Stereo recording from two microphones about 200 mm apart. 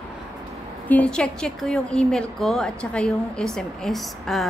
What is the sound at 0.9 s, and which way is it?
A woman's voice, 5° left (ahead or behind).